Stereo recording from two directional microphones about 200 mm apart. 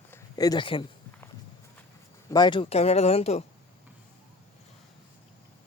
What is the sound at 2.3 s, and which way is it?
Speech, 20° left (ahead or behind).